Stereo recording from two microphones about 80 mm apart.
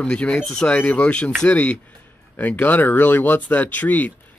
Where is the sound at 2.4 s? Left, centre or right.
Left.